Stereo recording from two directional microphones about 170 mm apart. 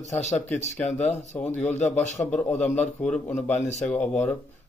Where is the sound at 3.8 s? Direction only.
10° left (ahead or behind).